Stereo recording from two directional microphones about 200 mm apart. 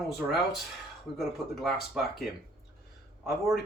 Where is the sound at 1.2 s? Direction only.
Centre (ahead or behind).